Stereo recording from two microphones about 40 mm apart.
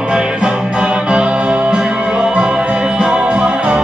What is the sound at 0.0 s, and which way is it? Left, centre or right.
Music, right.